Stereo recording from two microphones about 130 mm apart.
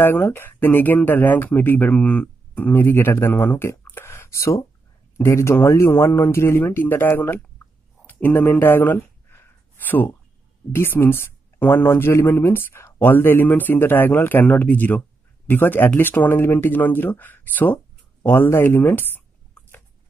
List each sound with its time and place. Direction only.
0.0 s speech: 15° left (ahead or behind)
8.1 s a sound: 15° left (ahead or behind)
10.7 s speech: 15° left (ahead or behind)